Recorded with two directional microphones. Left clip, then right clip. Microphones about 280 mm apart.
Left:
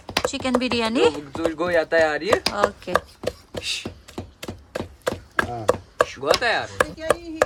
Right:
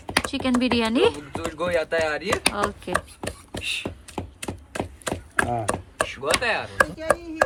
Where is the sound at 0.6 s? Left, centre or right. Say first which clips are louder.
Even; centre.